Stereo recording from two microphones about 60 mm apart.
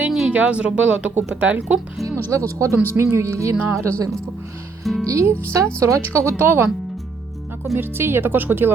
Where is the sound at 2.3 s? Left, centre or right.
Right.